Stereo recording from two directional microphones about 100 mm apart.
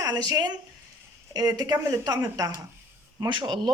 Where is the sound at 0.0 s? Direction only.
40° right (ahead or behind).